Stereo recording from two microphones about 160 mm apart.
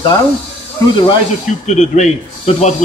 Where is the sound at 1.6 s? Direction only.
45° left (ahead or behind).